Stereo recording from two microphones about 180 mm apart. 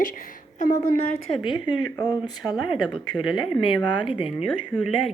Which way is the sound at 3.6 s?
25° left (ahead or behind).